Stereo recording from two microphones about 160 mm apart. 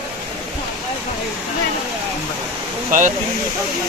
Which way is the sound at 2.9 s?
55° right (ahead or behind).